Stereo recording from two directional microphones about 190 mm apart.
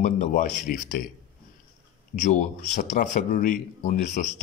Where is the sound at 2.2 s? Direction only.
40° left (ahead or behind).